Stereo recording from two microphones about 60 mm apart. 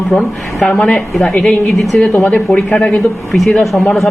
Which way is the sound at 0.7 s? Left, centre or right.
Centre.